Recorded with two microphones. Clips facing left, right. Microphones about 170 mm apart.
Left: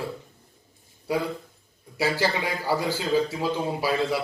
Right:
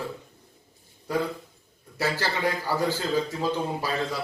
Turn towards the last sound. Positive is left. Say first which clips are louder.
# left 4 dB
turn(degrees=10)  # may be behind; listen again after turning